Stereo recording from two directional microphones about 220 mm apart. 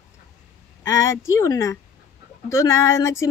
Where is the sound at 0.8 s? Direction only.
10° left (ahead or behind).